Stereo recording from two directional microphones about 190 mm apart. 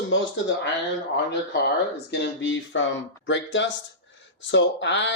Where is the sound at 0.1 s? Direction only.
70° left (ahead or behind).